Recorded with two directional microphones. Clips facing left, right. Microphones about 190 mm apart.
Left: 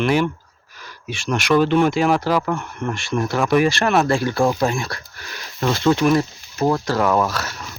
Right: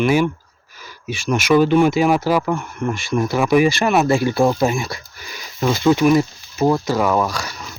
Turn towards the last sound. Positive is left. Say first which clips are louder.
# even
turn(degrees=5)  # may be behind; listen again after turning